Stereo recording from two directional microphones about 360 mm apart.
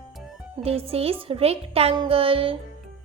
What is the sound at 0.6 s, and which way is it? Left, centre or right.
Speech, centre.